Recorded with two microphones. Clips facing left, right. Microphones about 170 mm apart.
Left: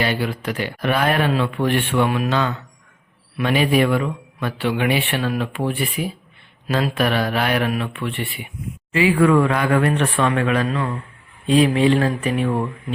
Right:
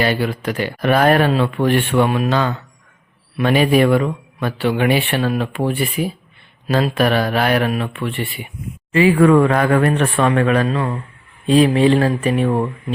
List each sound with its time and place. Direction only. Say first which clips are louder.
0.0 s speech: right 4 dB; 45° right (ahead or behind)
2.0 s speech: right 3 dB; 30° right (ahead or behind)